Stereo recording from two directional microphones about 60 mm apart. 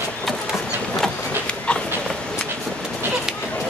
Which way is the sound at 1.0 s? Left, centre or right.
Centre.